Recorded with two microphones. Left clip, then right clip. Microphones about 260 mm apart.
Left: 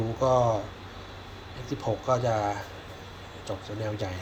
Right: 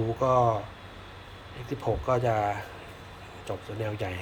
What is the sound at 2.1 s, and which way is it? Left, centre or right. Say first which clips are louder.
Speech: even; centre.